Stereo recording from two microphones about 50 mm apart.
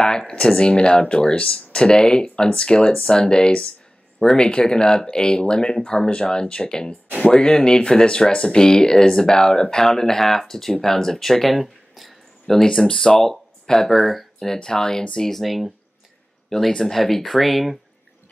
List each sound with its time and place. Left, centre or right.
0.3 s speech: centre
12.6 s speech: centre